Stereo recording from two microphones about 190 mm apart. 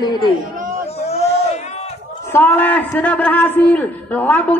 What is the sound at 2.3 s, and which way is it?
A man's voice, 10° left (ahead or behind).